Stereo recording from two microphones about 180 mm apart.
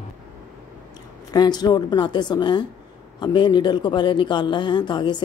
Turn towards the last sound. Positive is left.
turn(degrees=25)  # may be behind; listen again after turning